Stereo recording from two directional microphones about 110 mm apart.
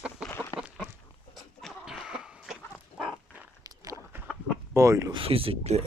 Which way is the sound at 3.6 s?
30° right (ahead or behind).